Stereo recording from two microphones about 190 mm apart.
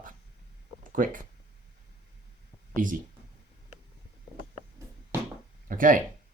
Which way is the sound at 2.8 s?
45° right (ahead or behind).